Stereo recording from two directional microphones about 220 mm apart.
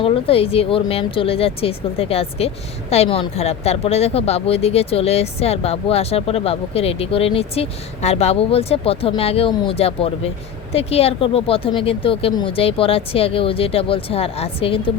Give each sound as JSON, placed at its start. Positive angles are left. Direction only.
{"t": 0.0, "sound": "speech", "side_deg": 25}